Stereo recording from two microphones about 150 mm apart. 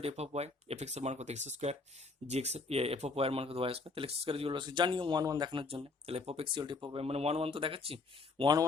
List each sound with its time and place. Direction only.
0.0 s speech: 45° right (ahead or behind)